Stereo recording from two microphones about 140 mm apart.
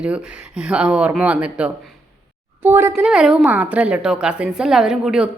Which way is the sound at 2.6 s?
15° right (ahead or behind).